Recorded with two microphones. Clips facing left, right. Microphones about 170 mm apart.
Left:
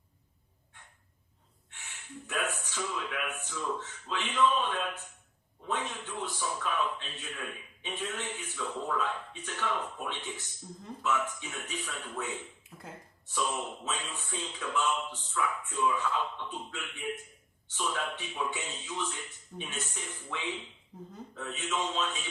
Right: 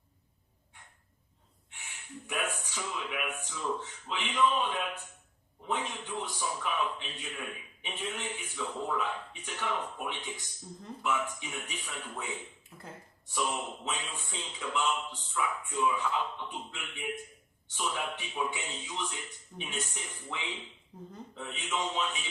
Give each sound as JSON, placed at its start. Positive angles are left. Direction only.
{"t": 1.7, "sound": "speech", "side_deg": -15}